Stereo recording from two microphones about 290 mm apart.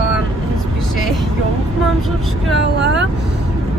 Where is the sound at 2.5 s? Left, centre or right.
Right.